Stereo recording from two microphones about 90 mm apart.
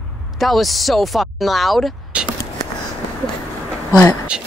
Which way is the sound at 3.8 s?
40° left (ahead or behind).